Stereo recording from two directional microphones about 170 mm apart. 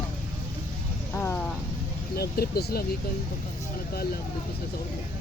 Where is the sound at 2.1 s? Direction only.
65° left (ahead or behind).